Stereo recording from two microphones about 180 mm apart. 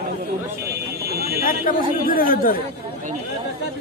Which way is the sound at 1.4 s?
55° left (ahead or behind).